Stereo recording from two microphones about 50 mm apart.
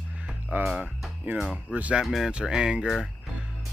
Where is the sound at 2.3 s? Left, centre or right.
Centre.